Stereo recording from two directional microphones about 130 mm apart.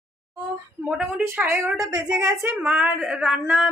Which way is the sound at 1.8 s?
25° right (ahead or behind).